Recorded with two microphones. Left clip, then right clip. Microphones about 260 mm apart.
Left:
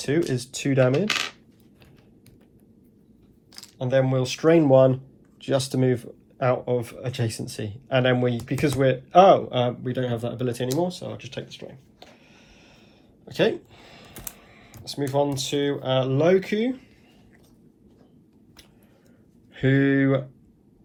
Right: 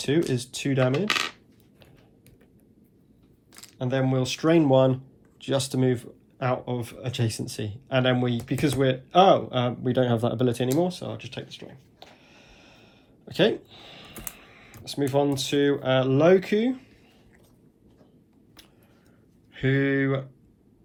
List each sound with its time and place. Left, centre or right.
0.0 s speech: right
0.3 s speech: centre
3.8 s speech: centre
4.7 s speech: right
5.9 s speech: centre
13.2 s a sound: centre
14.4 s typing: centre
14.9 s speech: centre
19.5 s speech: centre